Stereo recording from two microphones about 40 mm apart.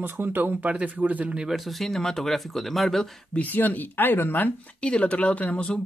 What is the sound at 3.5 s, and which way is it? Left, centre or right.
Speech, left.